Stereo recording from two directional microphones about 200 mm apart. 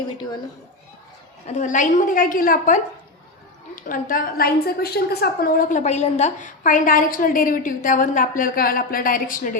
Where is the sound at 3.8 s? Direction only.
45° left (ahead or behind).